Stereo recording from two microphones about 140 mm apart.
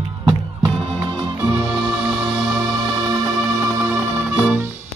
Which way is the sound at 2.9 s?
25° right (ahead or behind).